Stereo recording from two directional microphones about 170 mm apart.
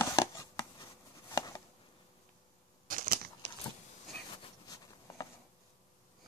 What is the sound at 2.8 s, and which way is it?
Crushing, 55° right (ahead or behind).